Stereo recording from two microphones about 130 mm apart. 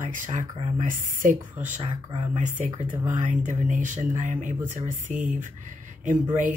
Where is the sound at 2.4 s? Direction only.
75° right (ahead or behind).